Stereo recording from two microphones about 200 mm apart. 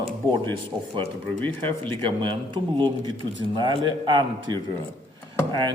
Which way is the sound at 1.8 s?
25° right (ahead or behind).